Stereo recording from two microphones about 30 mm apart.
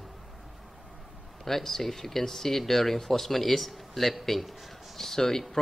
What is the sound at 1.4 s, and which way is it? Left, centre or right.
Speech, centre.